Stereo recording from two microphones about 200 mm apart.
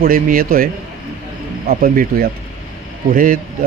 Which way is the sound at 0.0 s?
45° right (ahead or behind).